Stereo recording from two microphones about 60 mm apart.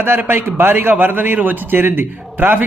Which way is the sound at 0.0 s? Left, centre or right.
Right.